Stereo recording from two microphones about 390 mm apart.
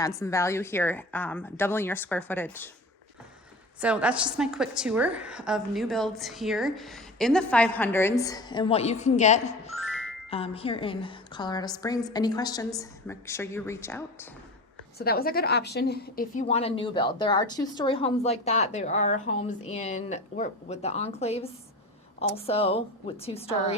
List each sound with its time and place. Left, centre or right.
0.0 s a woman's voice: centre
3.8 s a woman's voice: centre
14.9 s a woman's voice: left